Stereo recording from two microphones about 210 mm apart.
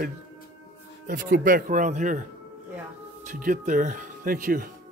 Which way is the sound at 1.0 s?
40° right (ahead or behind).